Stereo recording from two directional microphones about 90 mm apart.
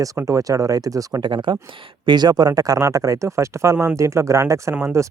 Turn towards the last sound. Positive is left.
turn(degrees=-35)  # may be behind; listen again after turning